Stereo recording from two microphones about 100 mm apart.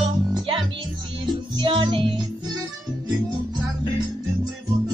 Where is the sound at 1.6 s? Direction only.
55° right (ahead or behind).